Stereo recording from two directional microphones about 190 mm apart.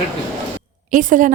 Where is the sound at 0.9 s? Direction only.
45° right (ahead or behind).